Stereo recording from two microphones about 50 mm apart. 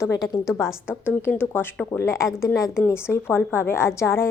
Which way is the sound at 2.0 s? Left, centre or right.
Left.